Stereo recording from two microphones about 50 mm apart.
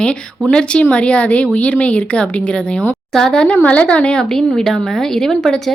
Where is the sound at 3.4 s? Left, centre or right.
Left.